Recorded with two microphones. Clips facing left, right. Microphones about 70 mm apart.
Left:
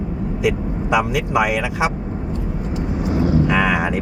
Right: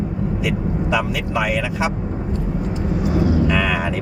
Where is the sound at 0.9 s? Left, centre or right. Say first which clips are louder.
Left 5 dB; centre.